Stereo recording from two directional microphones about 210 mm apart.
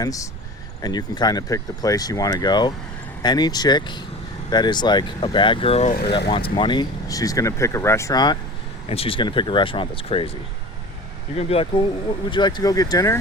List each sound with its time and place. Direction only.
0.0 s speech: 15° left (ahead or behind)
11.3 s speech: 30° left (ahead or behind)